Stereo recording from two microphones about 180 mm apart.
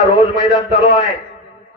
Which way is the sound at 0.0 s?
Centre (ahead or behind).